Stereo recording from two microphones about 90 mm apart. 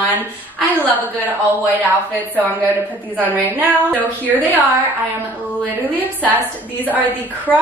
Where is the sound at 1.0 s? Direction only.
20° right (ahead or behind).